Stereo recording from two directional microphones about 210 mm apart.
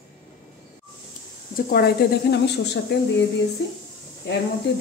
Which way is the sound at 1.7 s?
50° left (ahead or behind).